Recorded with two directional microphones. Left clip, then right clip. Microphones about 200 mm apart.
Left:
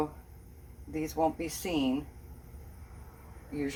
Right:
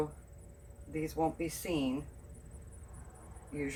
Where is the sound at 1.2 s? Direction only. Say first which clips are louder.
Left 5 dB; 30° left (ahead or behind).